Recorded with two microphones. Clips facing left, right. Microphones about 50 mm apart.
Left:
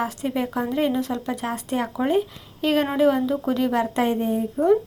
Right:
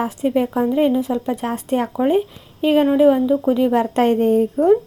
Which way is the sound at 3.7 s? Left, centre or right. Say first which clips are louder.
Right 5 dB; right.